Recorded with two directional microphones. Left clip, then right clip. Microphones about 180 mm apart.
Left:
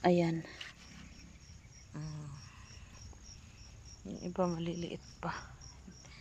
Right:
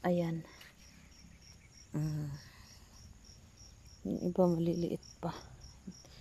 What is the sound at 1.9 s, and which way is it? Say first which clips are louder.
Cricket: right 8 dB; 35° right (ahead or behind).